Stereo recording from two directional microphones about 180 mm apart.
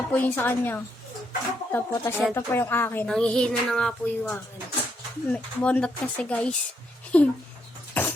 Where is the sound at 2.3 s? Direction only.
10° left (ahead or behind).